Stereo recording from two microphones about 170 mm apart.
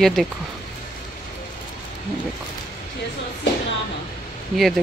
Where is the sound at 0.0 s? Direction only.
Centre (ahead or behind).